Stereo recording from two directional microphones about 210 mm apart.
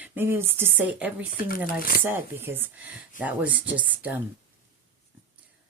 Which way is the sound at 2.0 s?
10° right (ahead or behind).